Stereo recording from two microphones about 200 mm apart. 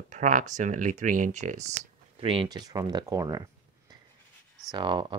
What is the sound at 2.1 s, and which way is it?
Speech, 25° right (ahead or behind).